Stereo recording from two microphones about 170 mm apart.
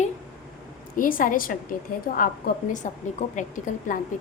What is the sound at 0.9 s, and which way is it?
A woman's voice, 55° left (ahead or behind).